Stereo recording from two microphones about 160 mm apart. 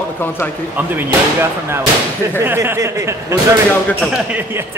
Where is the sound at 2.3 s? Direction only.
15° right (ahead or behind).